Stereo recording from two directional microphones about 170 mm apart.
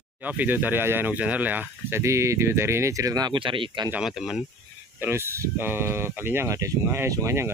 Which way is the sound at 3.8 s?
5° right (ahead or behind).